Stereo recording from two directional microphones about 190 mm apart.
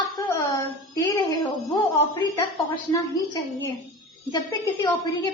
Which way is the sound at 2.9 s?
20° left (ahead or behind).